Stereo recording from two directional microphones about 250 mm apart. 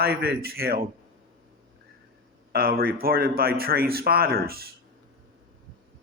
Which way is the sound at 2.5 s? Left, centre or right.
Right.